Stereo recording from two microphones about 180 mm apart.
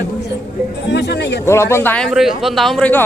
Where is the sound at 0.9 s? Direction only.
70° left (ahead or behind).